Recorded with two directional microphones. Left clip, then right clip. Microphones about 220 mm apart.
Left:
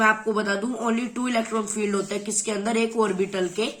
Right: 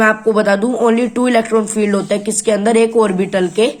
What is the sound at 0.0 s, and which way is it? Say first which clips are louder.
Speech: right 9 dB; 35° right (ahead or behind).